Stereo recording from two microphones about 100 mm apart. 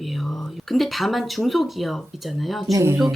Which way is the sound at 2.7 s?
30° right (ahead or behind).